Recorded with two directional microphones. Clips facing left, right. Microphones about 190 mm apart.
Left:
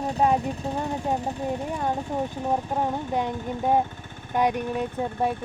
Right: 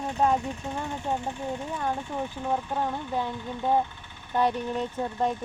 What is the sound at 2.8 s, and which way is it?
Speech, 20° left (ahead or behind).